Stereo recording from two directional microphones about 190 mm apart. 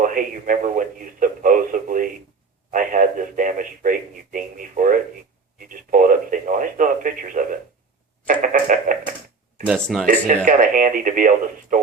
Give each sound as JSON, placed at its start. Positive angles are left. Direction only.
{"t": 0.0, "sound": "a man's voice", "side_deg": -45}
{"t": 5.5, "sound": "radio", "side_deg": -45}
{"t": 8.3, "sound": "a man's voice", "side_deg": -45}
{"t": 9.6, "sound": "speech", "side_deg": 0}
{"t": 10.1, "sound": "a man's voice", "side_deg": -45}